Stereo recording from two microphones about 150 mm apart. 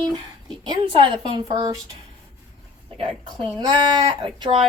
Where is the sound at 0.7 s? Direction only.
35° right (ahead or behind).